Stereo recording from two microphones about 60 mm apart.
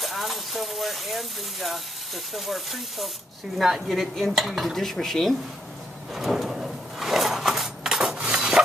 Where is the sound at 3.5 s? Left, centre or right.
Centre.